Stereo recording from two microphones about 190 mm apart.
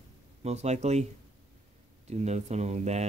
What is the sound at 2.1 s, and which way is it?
Speech, 35° right (ahead or behind).